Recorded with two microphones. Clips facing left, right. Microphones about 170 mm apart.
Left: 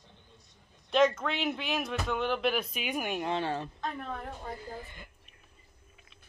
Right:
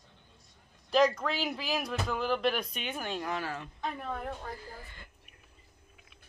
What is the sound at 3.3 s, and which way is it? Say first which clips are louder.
Speech: left 4 dB; 30° left (ahead or behind).